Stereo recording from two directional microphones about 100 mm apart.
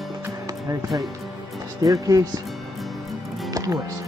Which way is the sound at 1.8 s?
35° right (ahead or behind).